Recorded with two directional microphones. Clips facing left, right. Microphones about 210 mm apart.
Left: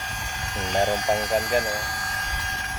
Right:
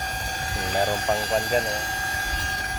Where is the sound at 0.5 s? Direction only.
35° right (ahead or behind).